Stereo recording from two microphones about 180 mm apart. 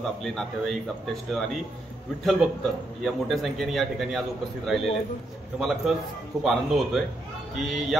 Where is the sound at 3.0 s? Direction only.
Centre (ahead or behind).